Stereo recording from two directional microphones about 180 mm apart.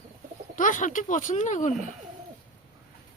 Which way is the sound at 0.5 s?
45° left (ahead or behind).